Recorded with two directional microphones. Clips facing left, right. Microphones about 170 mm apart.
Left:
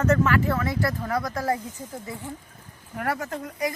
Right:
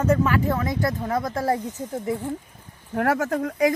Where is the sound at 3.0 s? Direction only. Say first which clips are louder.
Right 6 dB; 85° right.